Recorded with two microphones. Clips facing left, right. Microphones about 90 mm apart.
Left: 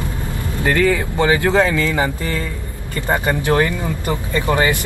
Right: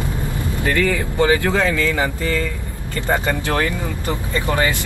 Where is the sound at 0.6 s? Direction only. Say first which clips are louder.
Left 3 dB; 25° left (ahead or behind).